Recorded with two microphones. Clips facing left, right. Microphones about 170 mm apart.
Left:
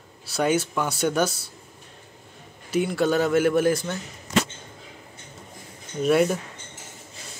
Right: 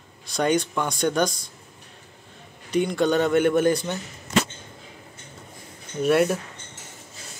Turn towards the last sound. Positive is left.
turn(degrees=0)  # may be behind; listen again after turning